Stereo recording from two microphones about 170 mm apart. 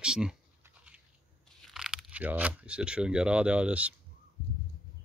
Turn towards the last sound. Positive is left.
turn(degrees=-5)  # may be behind; listen again after turning